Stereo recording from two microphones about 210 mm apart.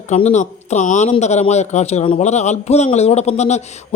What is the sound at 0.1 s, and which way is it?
A man's voice, 35° left (ahead or behind).